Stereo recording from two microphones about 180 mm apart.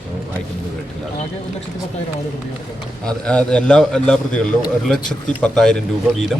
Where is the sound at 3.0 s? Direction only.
5° left (ahead or behind).